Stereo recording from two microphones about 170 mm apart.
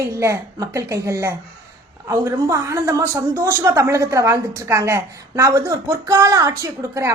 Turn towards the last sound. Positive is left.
turn(degrees=-20)  # may be behind; listen again after turning